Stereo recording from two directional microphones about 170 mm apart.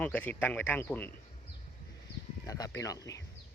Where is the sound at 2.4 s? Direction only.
20° left (ahead or behind).